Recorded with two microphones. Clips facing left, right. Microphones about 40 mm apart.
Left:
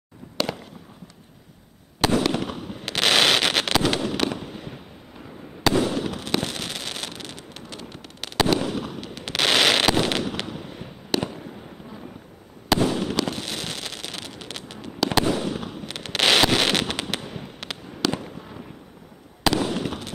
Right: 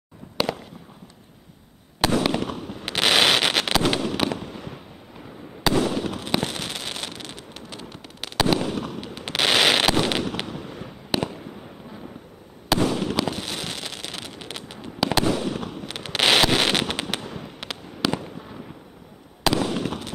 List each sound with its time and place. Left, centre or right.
2.1 s fireworks: centre
2.4 s fireworks: centre
2.8 s fireworks: centre
4.3 s fireworks: centre
5.7 s fireworks: centre
12.8 s fireworks: centre
15.0 s fireworks: centre
19.4 s fireworks: centre